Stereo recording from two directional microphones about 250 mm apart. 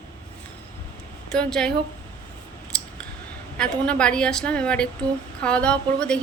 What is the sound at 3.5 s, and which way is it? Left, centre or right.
Speech, centre.